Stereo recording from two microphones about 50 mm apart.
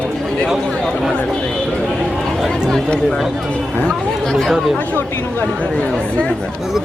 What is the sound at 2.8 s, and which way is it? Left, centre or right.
Speech, centre.